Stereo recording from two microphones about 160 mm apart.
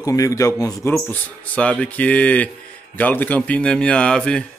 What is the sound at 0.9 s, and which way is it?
Speech, 10° left (ahead or behind).